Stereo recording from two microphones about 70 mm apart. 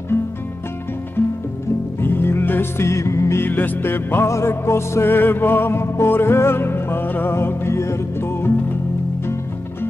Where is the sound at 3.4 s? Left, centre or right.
Left.